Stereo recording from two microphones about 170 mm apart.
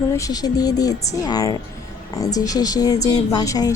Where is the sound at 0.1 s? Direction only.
20° left (ahead or behind).